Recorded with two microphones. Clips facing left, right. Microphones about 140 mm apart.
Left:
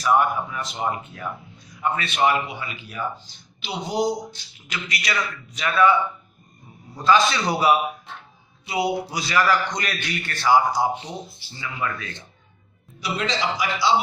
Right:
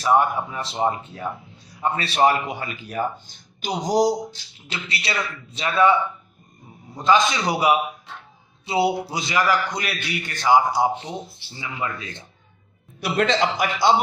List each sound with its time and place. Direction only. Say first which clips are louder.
0.0 s speech: right 1 dB; 25° right (ahead or behind)
7.0 s a man's voice: even; 20° right (ahead or behind)
8.6 s a man's voice: right 3 dB; 30° right (ahead or behind)
13.0 s a man's voice: right 5 dB; 55° right (ahead or behind)